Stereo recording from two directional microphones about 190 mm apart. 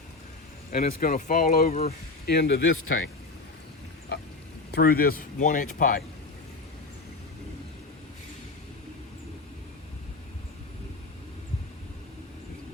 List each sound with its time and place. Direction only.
0.7 s speech: 45° left (ahead or behind); by 3.1 s 90° left
4.7 s speech: 50° left (ahead or behind)